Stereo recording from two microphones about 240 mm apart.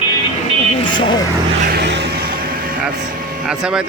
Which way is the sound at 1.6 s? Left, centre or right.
Right.